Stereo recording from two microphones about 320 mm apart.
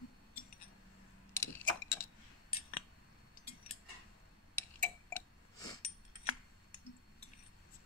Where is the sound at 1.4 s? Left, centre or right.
Centre.